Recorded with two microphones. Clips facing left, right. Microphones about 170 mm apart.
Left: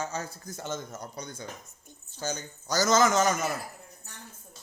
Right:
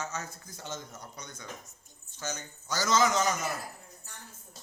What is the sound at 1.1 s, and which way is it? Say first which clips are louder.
Speech: left 5 dB; 30° left (ahead or behind).